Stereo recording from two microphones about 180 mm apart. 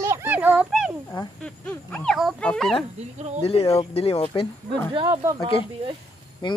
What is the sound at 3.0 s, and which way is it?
Speech, 40° right (ahead or behind).